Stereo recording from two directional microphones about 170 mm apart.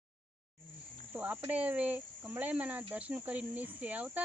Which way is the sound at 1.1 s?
10° right (ahead or behind).